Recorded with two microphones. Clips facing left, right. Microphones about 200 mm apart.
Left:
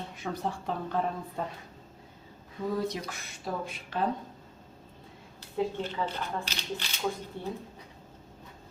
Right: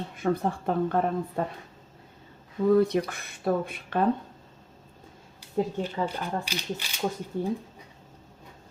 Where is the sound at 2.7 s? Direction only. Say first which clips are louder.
Right 10 dB; 60° right (ahead or behind).